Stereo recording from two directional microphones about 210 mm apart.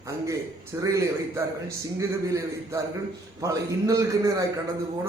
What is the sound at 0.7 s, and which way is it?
Speech, 10° right (ahead or behind).